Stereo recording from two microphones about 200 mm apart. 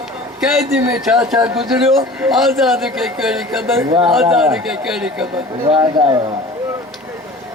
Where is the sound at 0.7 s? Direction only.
10° right (ahead or behind).